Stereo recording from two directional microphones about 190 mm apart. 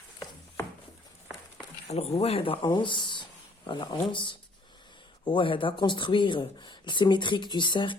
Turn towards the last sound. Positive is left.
turn(degrees=25)  # may be behind; listen again after turning